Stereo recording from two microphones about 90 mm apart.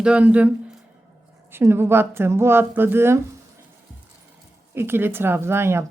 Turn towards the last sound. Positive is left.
turn(degrees=-25)  # may be behind; listen again after turning